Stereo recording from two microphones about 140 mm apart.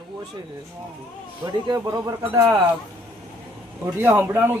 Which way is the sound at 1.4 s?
30° right (ahead or behind).